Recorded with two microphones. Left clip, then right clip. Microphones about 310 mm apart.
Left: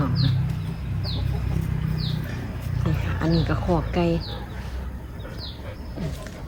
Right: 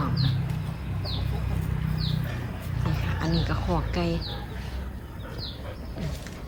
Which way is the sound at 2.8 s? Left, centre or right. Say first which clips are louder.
Left 4 dB; centre.